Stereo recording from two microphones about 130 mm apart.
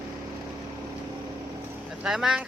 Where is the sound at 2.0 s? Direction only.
5° right (ahead or behind).